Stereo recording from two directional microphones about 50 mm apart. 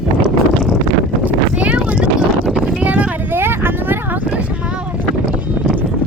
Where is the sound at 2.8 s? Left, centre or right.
Right.